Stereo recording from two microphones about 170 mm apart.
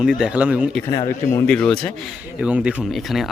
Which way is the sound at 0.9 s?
20° left (ahead or behind).